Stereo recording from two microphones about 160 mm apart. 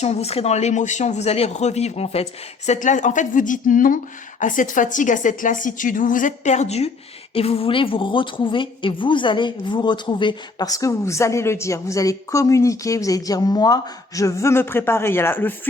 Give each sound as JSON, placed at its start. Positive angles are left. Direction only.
{"t": 0.0, "sound": "a woman's voice", "side_deg": 40}